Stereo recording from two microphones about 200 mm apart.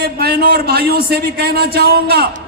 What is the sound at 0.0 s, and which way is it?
A man's voice, 55° right (ahead or behind).